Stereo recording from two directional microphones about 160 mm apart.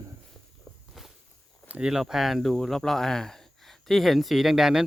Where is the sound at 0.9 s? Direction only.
Centre (ahead or behind).